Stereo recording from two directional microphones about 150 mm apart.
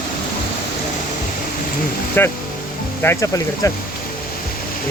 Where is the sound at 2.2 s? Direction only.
15° left (ahead or behind).